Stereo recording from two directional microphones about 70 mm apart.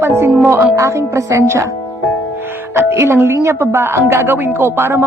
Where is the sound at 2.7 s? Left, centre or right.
Right.